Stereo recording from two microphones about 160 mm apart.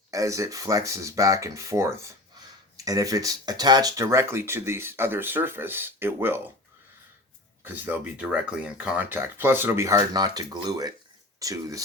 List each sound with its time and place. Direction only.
0.1 s speech: 20° right (ahead or behind)
7.6 s speech: 10° right (ahead or behind)